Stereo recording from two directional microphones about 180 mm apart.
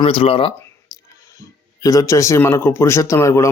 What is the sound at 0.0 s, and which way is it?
Speech, 30° left (ahead or behind).